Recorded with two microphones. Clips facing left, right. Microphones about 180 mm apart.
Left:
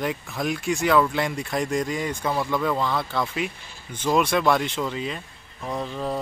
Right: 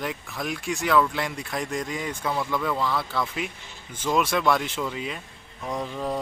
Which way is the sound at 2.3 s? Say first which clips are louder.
Left 2 dB; 15° left (ahead or behind).